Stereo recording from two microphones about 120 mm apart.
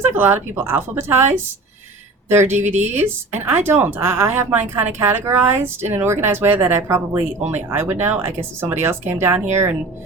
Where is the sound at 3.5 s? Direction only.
20° right (ahead or behind).